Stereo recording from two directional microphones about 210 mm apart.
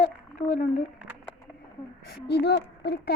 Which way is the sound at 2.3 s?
50° left (ahead or behind).